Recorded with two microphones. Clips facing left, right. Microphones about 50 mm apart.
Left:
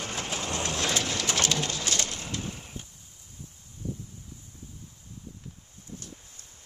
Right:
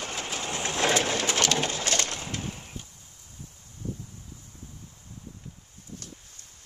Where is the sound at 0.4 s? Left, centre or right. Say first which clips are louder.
Right 4 dB; right.